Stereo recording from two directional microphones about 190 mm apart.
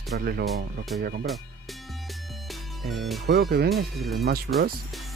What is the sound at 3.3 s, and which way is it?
Speech, 55° right (ahead or behind).